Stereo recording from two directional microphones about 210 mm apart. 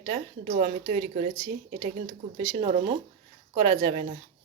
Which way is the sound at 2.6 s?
30° right (ahead or behind).